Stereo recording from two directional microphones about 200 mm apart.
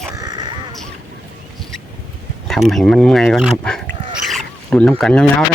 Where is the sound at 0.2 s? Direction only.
20° right (ahead or behind).